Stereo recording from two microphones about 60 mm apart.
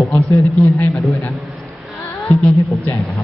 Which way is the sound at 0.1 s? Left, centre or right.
Left.